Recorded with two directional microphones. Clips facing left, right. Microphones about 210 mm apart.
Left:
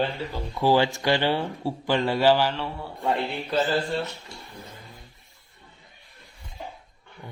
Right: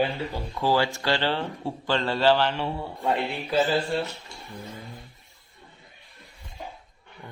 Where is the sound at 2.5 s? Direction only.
20° right (ahead or behind).